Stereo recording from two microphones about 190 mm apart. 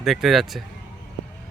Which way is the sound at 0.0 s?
Centre (ahead or behind).